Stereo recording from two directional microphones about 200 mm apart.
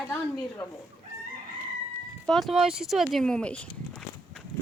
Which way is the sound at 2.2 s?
Centre (ahead or behind).